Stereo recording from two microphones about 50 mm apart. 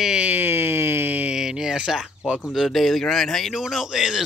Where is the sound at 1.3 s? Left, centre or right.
Centre.